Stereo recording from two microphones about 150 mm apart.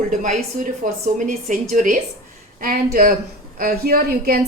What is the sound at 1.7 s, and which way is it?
A woman's voice, 65° right (ahead or behind).